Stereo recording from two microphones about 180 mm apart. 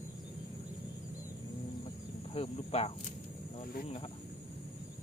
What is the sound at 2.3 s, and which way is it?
Speech, 35° left (ahead or behind).